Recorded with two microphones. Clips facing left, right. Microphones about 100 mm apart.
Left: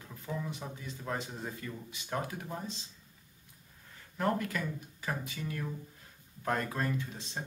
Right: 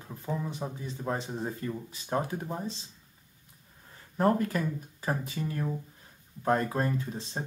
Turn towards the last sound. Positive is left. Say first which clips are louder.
# right 4 dB
turn(degrees=-35)  # may be behind; listen again after turning